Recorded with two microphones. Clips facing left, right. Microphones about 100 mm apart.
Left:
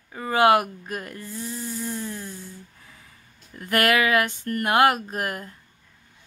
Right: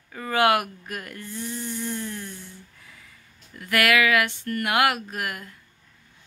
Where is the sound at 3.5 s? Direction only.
35° left (ahead or behind).